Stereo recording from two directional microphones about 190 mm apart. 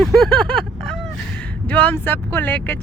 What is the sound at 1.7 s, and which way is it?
Speech, 5° left (ahead or behind).